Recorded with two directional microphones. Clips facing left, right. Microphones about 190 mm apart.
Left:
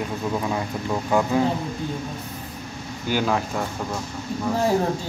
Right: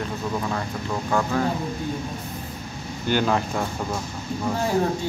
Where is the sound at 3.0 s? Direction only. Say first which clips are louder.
Right 1 dB; 5° left (ahead or behind).